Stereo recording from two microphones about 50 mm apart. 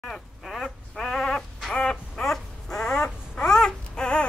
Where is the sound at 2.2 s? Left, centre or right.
Centre.